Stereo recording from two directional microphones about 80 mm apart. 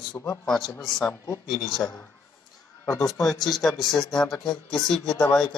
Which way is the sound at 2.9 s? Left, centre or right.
Left.